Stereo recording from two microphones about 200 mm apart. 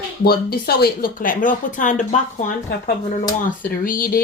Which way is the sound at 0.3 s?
50° left (ahead or behind).